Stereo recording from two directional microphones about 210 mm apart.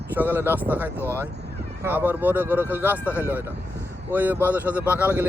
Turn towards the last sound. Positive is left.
turn(degrees=-10)  # may be behind; listen again after turning